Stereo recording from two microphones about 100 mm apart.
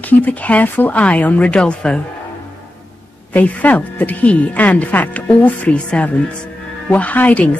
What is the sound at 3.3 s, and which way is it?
Speech, 15° left (ahead or behind).